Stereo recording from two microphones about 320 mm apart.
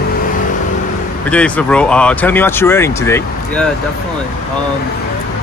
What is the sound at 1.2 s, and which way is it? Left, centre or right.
Speech, centre.